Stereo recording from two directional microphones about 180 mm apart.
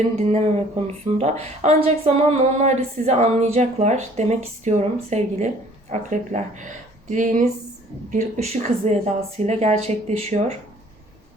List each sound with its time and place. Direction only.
0.0 s speech: 40° right (ahead or behind)